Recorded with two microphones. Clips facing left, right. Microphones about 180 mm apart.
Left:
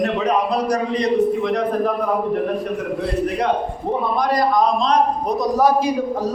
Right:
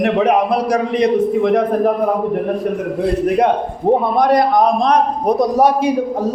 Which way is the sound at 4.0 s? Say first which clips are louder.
Right 5 dB; 60° right (ahead or behind).